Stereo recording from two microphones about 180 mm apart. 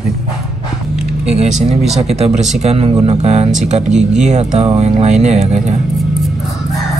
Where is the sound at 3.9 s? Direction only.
5° right (ahead or behind).